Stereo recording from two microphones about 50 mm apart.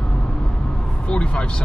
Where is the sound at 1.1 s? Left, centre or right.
Left.